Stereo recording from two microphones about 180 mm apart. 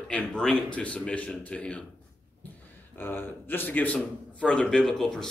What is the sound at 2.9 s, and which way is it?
A man's voice, 10° left (ahead or behind).